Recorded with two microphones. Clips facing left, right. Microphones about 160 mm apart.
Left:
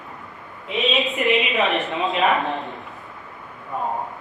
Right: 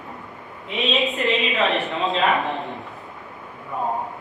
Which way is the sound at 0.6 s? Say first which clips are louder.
Left 1 dB; centre (ahead or behind).